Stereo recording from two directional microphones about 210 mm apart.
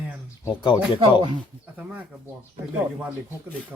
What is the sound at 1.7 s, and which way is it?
Speech, 5° right (ahead or behind).